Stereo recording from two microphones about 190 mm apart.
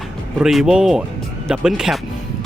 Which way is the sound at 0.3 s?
5° right (ahead or behind).